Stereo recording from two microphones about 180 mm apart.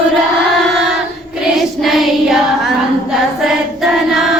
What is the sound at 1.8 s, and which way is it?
Child singing, centre (ahead or behind).